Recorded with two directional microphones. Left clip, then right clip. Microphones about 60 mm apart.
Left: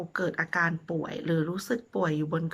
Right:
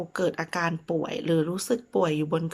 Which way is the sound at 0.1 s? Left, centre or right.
Right.